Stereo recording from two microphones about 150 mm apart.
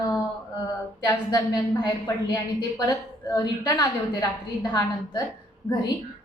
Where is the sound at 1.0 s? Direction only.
25° left (ahead or behind).